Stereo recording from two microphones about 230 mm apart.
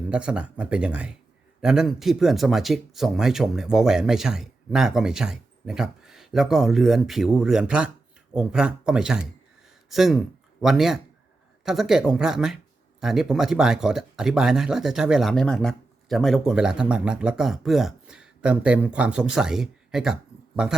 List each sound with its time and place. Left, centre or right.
0.1 s speech: centre